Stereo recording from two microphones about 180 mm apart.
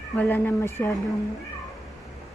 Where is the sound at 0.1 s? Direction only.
10° left (ahead or behind).